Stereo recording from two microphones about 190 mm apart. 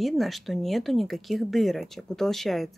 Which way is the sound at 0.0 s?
Centre (ahead or behind).